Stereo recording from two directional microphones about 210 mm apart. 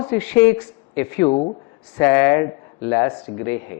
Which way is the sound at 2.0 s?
10° left (ahead or behind).